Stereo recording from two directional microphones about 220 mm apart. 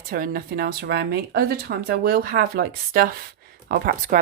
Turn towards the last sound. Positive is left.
turn(degrees=-40)  # may be behind; listen again after turning